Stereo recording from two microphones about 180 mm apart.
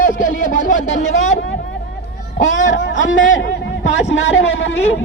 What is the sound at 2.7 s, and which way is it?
A man's voice, 90° left.